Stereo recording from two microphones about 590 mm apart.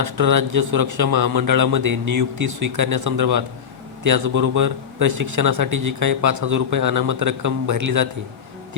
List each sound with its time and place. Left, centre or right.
0.2 s speech: right